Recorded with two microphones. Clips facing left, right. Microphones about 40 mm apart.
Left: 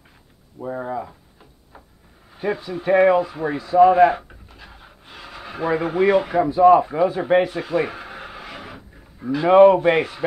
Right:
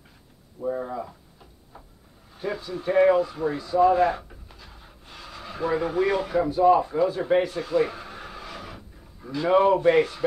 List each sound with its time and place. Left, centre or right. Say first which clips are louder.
0.6 s speech: left 2 dB; left
2.3 s speech: left 5 dB; left
4.6 s pant: left 4 dB; left
6.9 s speech: left 4 dB; left